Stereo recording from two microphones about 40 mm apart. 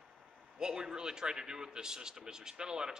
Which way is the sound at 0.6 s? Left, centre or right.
Centre.